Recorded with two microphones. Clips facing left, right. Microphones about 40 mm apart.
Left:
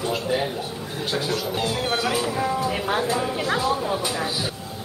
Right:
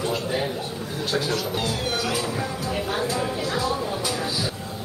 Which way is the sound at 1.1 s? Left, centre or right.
Centre.